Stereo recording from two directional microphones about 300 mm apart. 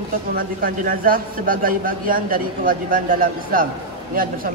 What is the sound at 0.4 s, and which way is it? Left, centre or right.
A man's voice, right.